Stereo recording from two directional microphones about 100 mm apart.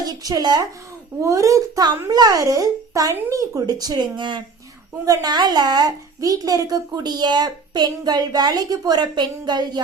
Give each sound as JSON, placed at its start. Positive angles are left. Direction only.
{"t": 0.0, "sound": "a child's voice", "side_deg": -40}